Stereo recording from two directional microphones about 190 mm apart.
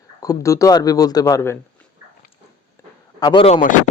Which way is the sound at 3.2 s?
20° left (ahead or behind).